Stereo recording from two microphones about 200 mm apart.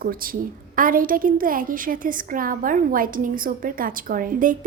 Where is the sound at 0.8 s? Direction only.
45° right (ahead or behind).